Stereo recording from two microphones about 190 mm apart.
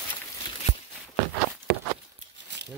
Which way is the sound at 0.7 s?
35° left (ahead or behind).